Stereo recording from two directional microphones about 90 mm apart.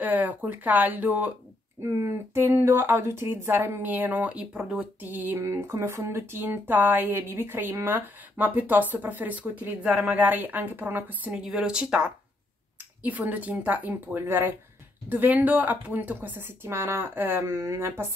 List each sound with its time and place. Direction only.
0.0 s speech: 20° right (ahead or behind)
1.8 s speech: 35° right (ahead or behind)
5.4 s speech: 30° right (ahead or behind)